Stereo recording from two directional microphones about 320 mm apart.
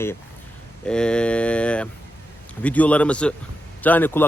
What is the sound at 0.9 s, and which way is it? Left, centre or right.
Speech, centre.